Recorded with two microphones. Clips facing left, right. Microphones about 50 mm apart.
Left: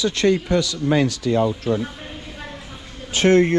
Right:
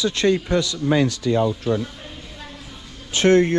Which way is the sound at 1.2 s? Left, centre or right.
Left.